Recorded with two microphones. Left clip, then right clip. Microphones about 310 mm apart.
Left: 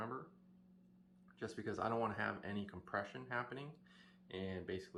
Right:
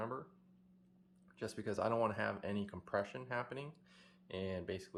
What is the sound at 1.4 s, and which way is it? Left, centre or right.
Speech, right.